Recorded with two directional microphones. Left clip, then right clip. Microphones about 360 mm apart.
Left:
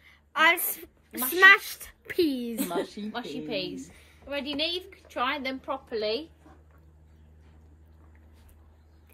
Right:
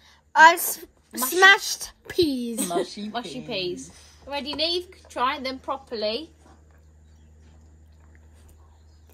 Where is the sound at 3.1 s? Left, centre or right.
Right.